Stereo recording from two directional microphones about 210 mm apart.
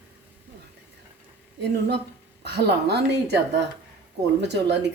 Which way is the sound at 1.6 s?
50° right (ahead or behind).